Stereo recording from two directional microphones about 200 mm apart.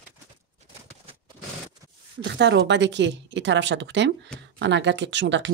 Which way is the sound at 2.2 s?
60° right (ahead or behind).